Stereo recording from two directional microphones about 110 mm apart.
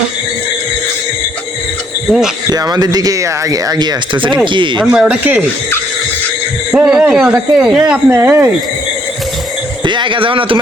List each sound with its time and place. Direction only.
2.0 s speech: 5° right (ahead or behind)
2.5 s speech: 35° right (ahead or behind)
4.8 s a man's voice: 10° right (ahead or behind)
6.7 s a man's voice: 10° right (ahead or behind)
8.1 s speech: 25° right (ahead or behind)
9.8 s speech: 45° right (ahead or behind)